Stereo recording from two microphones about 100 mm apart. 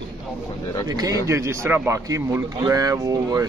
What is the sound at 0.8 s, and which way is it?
Speech, 40° right (ahead or behind).